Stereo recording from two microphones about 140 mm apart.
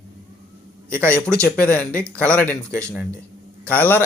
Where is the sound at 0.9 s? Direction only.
10° left (ahead or behind).